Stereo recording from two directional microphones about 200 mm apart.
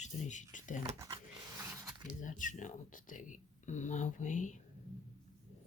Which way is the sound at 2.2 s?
40° left (ahead or behind).